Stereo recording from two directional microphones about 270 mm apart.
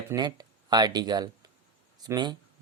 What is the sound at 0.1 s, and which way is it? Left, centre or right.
Speech, centre.